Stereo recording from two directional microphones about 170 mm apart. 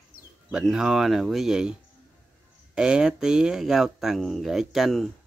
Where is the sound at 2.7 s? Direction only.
5° right (ahead or behind).